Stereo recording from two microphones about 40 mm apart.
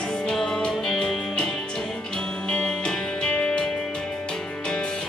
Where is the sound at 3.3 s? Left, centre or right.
Left.